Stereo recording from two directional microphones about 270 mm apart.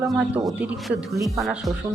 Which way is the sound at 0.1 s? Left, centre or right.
Centre.